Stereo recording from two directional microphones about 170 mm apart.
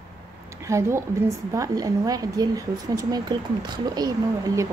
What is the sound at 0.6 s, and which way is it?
A woman's voice, 15° right (ahead or behind).